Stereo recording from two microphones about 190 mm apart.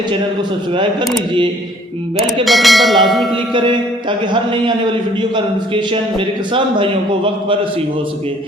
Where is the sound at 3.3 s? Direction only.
25° right (ahead or behind).